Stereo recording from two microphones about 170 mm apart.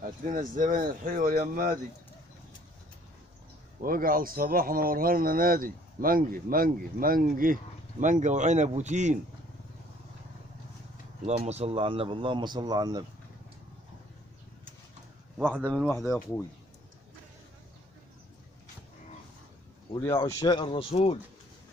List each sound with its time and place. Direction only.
0.0 s speech: 50° right (ahead or behind)
3.8 s speech: 55° right (ahead or behind)
11.2 s speech: 40° right (ahead or behind); by 13.0 s 25° right (ahead or behind)
15.3 s speech: 10° right (ahead or behind)
20.0 s speech: 15° left (ahead or behind); by 21.2 s 35° left (ahead or behind)